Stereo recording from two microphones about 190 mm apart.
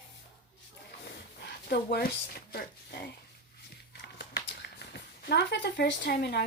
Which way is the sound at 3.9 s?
60° left (ahead or behind).